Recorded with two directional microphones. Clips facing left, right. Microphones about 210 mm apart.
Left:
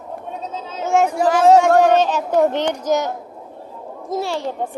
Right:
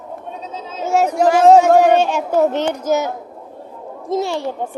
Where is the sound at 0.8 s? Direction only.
5° right (ahead or behind).